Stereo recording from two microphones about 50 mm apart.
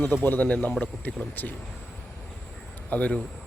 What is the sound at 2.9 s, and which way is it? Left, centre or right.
Speech, left.